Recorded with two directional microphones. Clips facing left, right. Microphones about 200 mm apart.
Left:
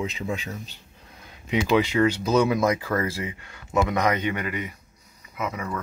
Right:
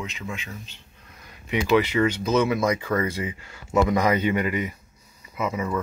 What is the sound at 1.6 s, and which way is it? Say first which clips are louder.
Speech: right 1 dB; 15° left (ahead or behind).